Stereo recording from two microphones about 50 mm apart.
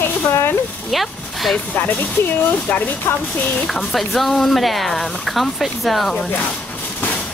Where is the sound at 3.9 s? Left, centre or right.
Centre.